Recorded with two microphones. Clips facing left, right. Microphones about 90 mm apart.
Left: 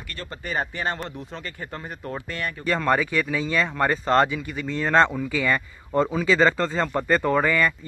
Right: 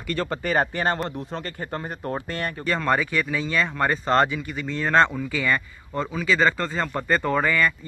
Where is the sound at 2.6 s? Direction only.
5° left (ahead or behind).